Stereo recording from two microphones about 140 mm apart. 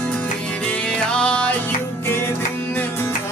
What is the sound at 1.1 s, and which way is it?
Music, 10° left (ahead or behind).